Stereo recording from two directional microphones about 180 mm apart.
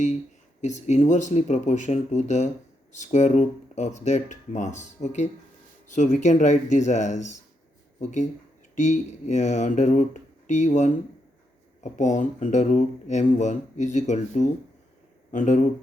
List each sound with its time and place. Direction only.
0.6 s speech: 40° left (ahead or behind)
8.7 s speech: 40° left (ahead or behind)